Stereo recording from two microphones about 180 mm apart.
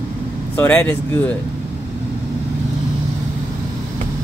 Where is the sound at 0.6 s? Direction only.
10° left (ahead or behind).